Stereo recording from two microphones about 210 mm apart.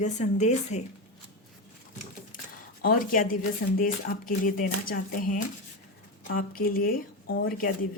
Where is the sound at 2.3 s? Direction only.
40° left (ahead or behind).